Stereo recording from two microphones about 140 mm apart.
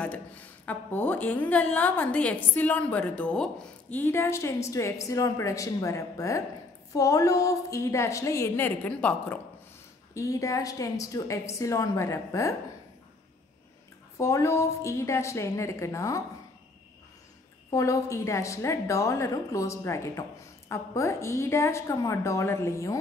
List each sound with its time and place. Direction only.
0.0 s a woman's voice: 10° left (ahead or behind)
10.1 s a woman's voice: 25° left (ahead or behind)
14.1 s a woman's voice: 20° left (ahead or behind)
17.6 s a woman's voice: 25° left (ahead or behind)